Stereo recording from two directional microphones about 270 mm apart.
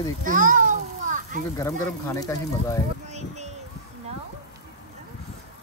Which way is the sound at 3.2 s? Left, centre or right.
Right.